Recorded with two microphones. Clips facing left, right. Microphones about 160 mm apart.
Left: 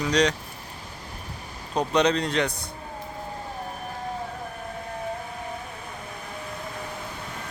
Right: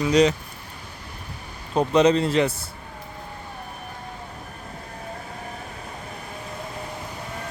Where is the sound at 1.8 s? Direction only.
5° right (ahead or behind).